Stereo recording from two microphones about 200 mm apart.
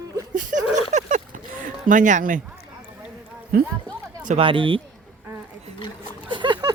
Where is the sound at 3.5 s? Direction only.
50° right (ahead or behind).